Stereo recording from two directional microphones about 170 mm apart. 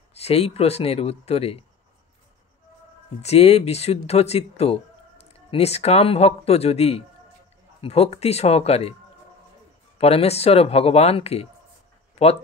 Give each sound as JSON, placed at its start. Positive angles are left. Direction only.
{"t": 0.1, "sound": "speech", "side_deg": 35}
{"t": 3.2, "sound": "speech", "side_deg": 40}
{"t": 9.9, "sound": "speech", "side_deg": 35}